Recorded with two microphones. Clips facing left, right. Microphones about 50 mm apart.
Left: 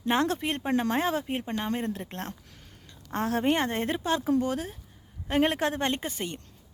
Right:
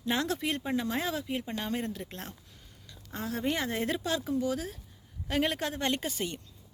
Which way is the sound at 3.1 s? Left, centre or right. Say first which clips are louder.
Left 6 dB; left.